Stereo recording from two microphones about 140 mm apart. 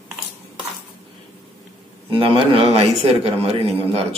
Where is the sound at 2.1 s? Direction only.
40° right (ahead or behind).